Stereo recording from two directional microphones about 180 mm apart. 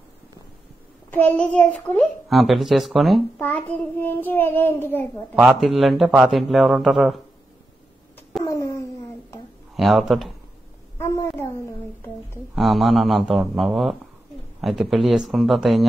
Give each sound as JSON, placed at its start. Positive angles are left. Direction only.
{"t": 1.1, "sound": "a child's voice", "side_deg": 10}
{"t": 3.3, "sound": "child singing", "side_deg": 10}
{"t": 5.3, "sound": "a child's voice", "side_deg": -5}
{"t": 8.5, "sound": "a sound", "side_deg": 15}
{"t": 9.8, "sound": "speech", "side_deg": 0}
{"t": 11.0, "sound": "a sound", "side_deg": 15}
{"t": 12.5, "sound": "a child's voice", "side_deg": 0}